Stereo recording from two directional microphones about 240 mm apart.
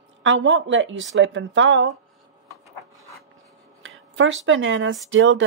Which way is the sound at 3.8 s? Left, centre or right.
Right.